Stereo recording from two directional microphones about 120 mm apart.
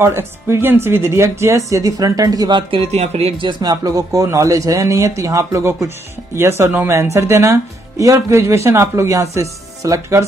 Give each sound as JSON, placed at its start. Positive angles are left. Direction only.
{"t": 0.0, "sound": "speech", "side_deg": -20}
{"t": 2.9, "sound": "speech", "side_deg": -60}
{"t": 3.4, "sound": "speech", "side_deg": -30}